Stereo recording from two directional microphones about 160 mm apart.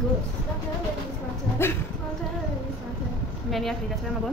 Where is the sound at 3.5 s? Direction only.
Centre (ahead or behind).